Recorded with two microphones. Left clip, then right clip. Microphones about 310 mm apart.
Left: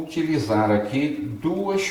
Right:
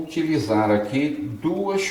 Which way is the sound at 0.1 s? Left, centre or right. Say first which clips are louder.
Right 1 dB; centre.